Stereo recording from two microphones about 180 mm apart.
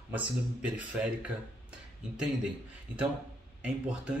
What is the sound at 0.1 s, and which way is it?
Speech, 5° right (ahead or behind).